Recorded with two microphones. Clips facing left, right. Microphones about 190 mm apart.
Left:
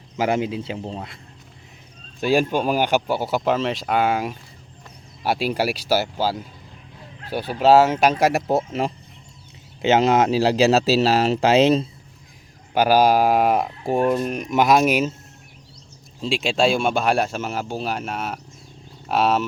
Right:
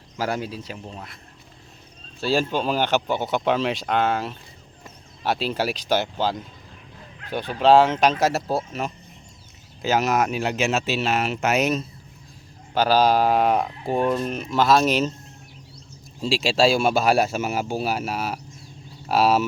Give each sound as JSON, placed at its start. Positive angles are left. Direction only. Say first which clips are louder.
{"t": 0.2, "sound": "speech", "louder": "left 5 dB", "side_deg": 20}
{"t": 2.2, "sound": "speech", "louder": "left 3 dB", "side_deg": 15}
{"t": 12.7, "sound": "speech", "louder": "left 2 dB", "side_deg": 10}
{"t": 16.2, "sound": "speech", "louder": "even", "side_deg": 0}